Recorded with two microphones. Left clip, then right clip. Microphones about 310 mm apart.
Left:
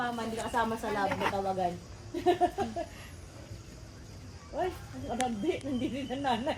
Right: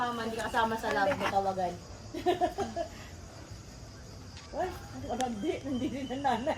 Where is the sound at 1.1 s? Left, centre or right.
Centre.